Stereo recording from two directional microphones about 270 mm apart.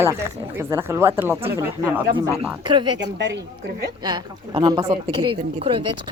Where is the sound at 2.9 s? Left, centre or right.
Right.